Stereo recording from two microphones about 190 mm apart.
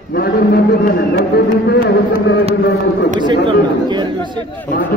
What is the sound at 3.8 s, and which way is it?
Speech, 25° right (ahead or behind).